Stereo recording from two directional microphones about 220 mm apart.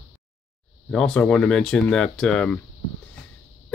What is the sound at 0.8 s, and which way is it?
Speech, 5° left (ahead or behind).